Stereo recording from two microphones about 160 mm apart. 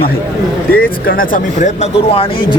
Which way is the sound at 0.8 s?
65° left (ahead or behind).